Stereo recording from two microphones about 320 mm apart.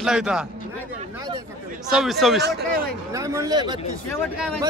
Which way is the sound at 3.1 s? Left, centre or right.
Centre.